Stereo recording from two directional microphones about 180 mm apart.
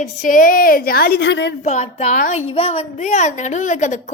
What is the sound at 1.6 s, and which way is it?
A woman's voice, 40° left (ahead or behind).